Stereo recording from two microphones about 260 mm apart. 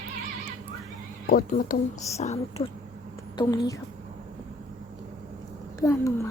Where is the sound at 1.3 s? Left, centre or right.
Left.